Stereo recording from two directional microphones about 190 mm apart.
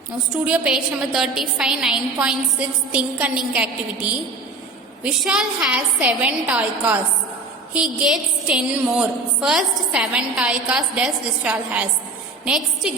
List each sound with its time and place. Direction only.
0.3 s a woman's voice: 5° right (ahead or behind)
5.0 s a woman's voice: 5° right (ahead or behind)